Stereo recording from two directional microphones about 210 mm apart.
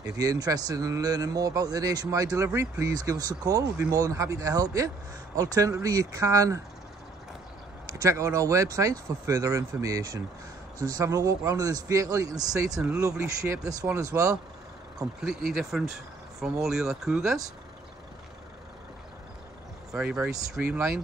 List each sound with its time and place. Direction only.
0.2 s speech: 15° right (ahead or behind)
7.8 s speech: 15° right (ahead or behind)
12.8 s speech: 5° right (ahead or behind)
15.0 s speech: centre (ahead or behind)
19.9 s speech: 5° right (ahead or behind)